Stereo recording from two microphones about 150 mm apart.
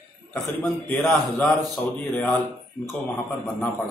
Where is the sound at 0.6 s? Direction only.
10° left (ahead or behind).